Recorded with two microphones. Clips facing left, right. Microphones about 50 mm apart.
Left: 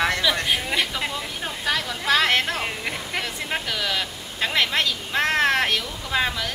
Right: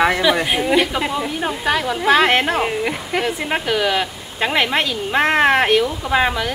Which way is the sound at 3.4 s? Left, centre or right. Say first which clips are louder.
Right 8 dB; right.